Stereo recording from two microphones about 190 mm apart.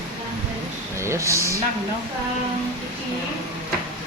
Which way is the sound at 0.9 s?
15° right (ahead or behind).